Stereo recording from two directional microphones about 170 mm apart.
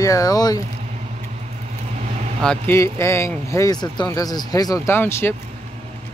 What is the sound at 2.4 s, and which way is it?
Speech, 15° left (ahead or behind).